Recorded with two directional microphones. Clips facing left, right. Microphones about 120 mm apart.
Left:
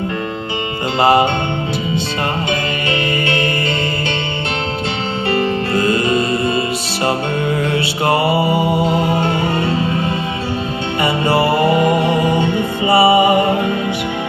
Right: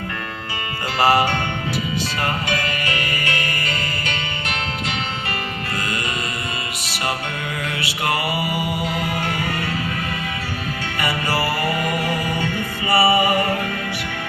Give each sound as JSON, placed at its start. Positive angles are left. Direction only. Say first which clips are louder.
{"t": 0.9, "sound": "music", "louder": "left 5 dB", "side_deg": 25}
{"t": 2.5, "sound": "music", "louder": "left 5 dB", "side_deg": 25}
{"t": 5.3, "sound": "music", "louder": "left 11 dB", "side_deg": 30}
{"t": 7.7, "sound": "music", "louder": "left 8 dB", "side_deg": 30}
{"t": 11.0, "sound": "music", "louder": "left 7 dB", "side_deg": 25}